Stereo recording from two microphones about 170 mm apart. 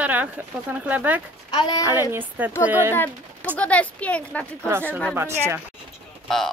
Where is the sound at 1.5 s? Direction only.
25° left (ahead or behind).